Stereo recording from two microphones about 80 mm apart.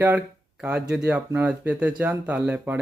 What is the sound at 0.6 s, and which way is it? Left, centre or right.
Speech, centre.